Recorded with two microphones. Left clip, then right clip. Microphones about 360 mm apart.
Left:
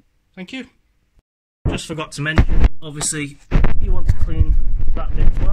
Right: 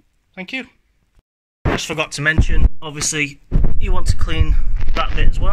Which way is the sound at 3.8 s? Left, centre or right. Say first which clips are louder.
Right 6 dB; right.